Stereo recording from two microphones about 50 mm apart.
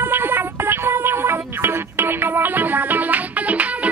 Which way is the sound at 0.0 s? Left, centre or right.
Right.